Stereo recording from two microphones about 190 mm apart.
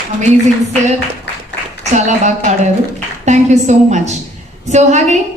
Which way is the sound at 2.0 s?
40° right (ahead or behind).